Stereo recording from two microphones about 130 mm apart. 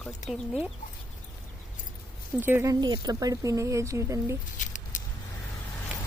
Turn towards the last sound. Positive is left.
turn(degrees=75)  # may be behind; listen again after turning